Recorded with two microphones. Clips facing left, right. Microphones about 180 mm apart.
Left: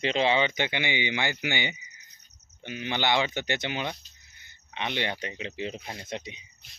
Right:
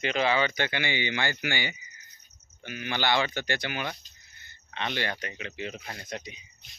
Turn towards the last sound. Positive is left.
turn(degrees=25)  # may be behind; listen again after turning